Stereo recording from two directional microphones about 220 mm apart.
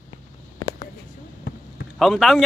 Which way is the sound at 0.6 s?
15° left (ahead or behind).